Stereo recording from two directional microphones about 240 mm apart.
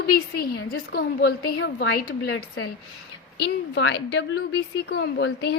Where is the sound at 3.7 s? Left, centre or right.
Left.